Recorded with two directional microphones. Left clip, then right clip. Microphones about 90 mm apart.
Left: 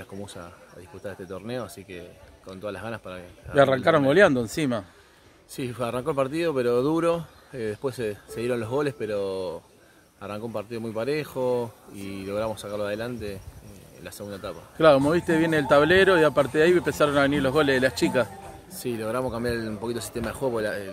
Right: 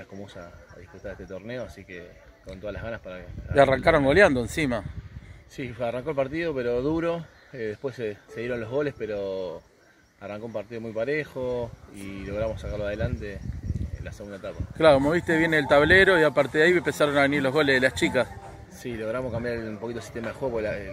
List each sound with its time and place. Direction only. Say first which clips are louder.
1.0 s speech: left 1 dB; 40° left (ahead or behind)
3.5 s speech: even; 5° right (ahead or behind)
5.6 s speech: left 1 dB; 40° left (ahead or behind)
14.8 s speech: left 1 dB; 5° left (ahead or behind)
18.8 s speech: left 2 dB; 30° left (ahead or behind)